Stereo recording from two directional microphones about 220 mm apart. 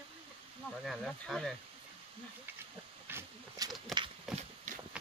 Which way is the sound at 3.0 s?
10° right (ahead or behind).